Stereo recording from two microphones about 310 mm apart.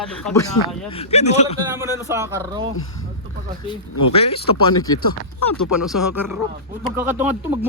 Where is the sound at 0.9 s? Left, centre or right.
Centre.